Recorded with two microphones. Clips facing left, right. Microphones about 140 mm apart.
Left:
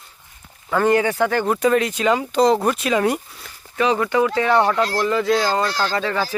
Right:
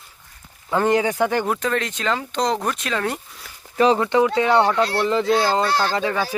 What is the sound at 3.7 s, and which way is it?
Speech, 30° right (ahead or behind).